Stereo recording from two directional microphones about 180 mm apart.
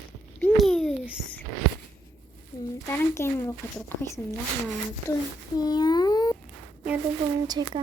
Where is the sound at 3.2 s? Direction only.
15° left (ahead or behind).